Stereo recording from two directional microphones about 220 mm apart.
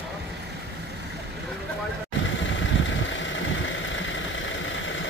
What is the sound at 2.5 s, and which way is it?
Vehicle, 60° left (ahead or behind).